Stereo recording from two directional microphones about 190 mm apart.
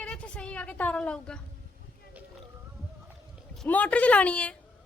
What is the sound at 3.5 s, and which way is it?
A woman's voice, 5° left (ahead or behind).